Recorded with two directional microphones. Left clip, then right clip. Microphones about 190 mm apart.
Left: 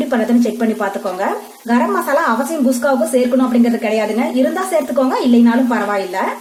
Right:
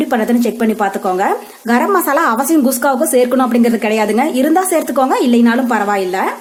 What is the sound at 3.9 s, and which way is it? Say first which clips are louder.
A woman's voice: right 3 dB; 45° right (ahead or behind).